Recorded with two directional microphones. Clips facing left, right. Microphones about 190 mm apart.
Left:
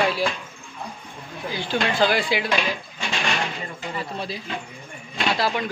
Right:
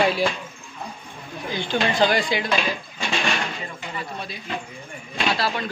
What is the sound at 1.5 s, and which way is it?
Speech, 5° left (ahead or behind).